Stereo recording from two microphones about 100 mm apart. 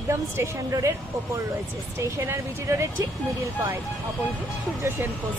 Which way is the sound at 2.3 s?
30° right (ahead or behind).